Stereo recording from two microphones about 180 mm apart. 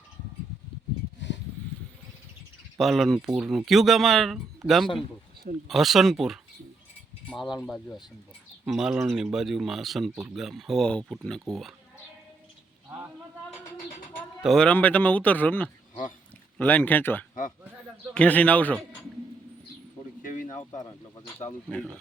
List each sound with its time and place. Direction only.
2.7 s speech: centre (ahead or behind)
14.4 s speech: 5° left (ahead or behind)
20.2 s bird: 45° left (ahead or behind)
21.7 s speech: 5° left (ahead or behind)